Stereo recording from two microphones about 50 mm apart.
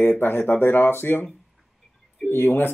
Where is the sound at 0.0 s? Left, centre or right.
Left.